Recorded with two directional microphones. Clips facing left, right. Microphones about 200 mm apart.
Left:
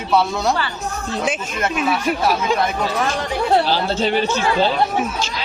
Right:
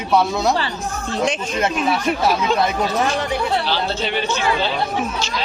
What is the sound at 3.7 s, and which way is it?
Speech, 40° left (ahead or behind).